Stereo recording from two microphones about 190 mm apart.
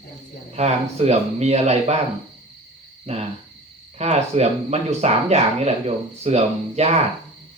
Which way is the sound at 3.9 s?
35° right (ahead or behind).